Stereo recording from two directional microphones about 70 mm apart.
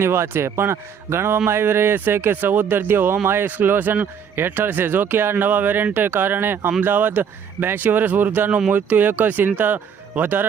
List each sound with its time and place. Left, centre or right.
0.0 s speech: right